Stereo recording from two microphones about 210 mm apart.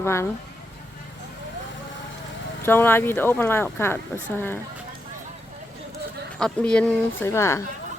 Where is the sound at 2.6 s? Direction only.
10° left (ahead or behind).